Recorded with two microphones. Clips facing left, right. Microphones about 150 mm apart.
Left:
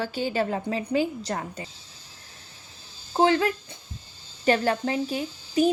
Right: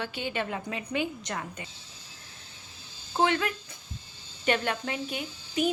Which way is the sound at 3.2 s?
35° left (ahead or behind).